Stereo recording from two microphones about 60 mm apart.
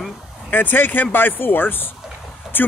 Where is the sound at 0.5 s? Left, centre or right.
Left.